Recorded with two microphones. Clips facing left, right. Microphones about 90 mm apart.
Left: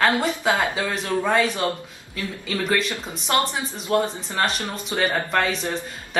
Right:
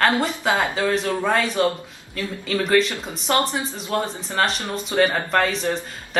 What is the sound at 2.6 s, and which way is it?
Speech, centre (ahead or behind).